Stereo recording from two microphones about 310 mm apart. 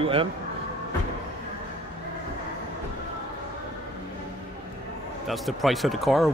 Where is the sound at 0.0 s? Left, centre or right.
Centre.